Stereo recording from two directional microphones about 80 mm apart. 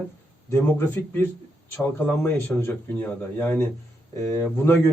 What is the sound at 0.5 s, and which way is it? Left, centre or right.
A man's voice, left.